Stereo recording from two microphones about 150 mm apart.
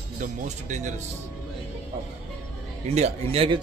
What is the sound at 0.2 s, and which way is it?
Speech, 55° right (ahead or behind).